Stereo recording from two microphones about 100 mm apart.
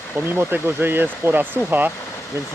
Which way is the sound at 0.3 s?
20° right (ahead or behind).